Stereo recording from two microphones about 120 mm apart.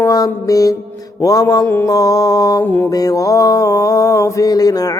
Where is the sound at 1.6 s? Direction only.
20° left (ahead or behind).